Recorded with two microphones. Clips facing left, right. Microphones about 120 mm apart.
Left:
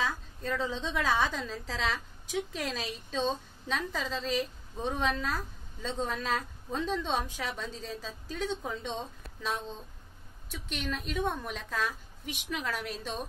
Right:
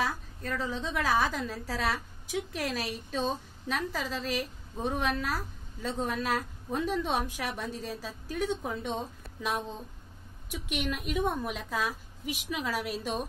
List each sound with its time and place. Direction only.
0.4 s a woman's voice: 20° left (ahead or behind)
1.0 s a woman's voice: 10° right (ahead or behind)